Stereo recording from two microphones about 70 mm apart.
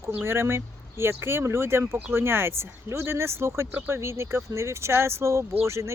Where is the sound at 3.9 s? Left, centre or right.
Right.